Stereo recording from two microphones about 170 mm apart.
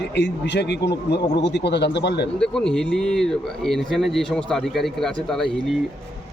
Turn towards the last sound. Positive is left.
turn(degrees=5)  # may be behind; listen again after turning